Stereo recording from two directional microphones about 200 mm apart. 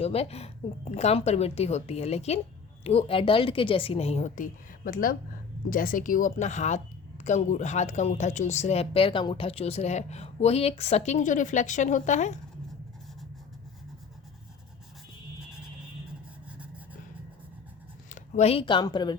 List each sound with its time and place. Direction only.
0.0 s a woman's voice: 30° left (ahead or behind)
18.1 s speech: 35° left (ahead or behind)